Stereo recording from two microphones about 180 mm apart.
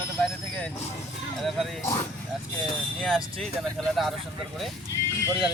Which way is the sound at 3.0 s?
Centre (ahead or behind).